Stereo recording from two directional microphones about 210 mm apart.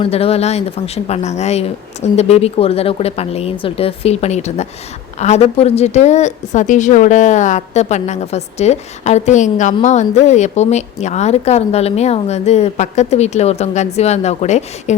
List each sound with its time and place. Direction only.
0.0 s a woman's voice: 30° left (ahead or behind)